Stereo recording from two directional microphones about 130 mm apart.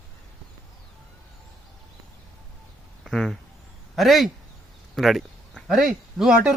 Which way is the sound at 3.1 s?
5° left (ahead or behind).